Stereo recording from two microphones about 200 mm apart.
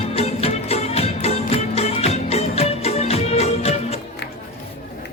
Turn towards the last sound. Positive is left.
turn(degrees=30)  # may be behind; listen again after turning